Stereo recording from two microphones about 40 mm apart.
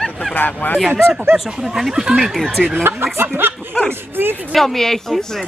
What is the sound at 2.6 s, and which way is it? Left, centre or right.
Speech, right.